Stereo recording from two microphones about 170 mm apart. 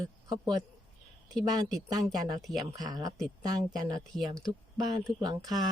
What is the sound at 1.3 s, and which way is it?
Speech, centre (ahead or behind).